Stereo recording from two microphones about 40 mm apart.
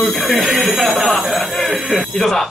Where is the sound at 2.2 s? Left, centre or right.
Centre.